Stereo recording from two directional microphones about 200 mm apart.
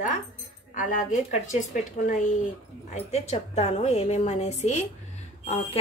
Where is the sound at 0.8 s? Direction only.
40° left (ahead or behind).